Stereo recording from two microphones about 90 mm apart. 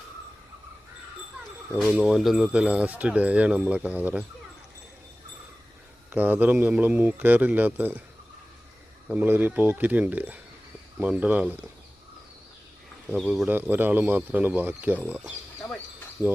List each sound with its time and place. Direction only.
2.0 s speech: 5° right (ahead or behind)
6.1 s a man's voice: 20° right (ahead or behind)
9.0 s a man's voice: 20° right (ahead or behind)
13.1 s speech: 5° right (ahead or behind)
13.5 s a man's voice: 20° right (ahead or behind)